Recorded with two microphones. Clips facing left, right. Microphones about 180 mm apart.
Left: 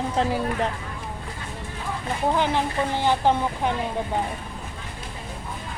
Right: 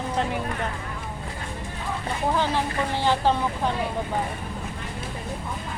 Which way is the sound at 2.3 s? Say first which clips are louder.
Left 1 dB; 15° left (ahead or behind).